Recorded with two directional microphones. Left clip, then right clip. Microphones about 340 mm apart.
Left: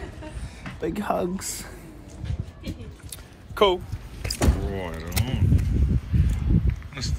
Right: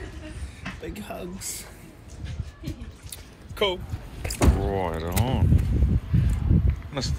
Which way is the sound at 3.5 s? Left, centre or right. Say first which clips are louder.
Left 5 dB; centre.